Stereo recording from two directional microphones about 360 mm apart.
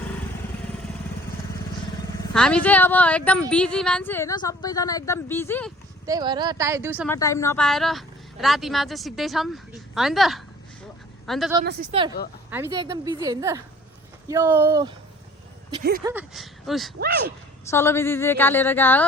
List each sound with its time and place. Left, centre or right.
2.3 s a woman's voice: centre
6.1 s a woman's voice: centre
7.1 s speech: centre
11.6 s a woman's voice: right; by 14.9 s centre
15.8 s speech: right
16.0 s speech: centre
17.0 s speech: right
17.7 s speech: centre